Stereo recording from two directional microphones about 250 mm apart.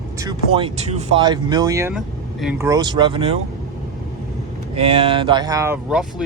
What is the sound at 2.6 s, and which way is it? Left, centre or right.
Speech, centre.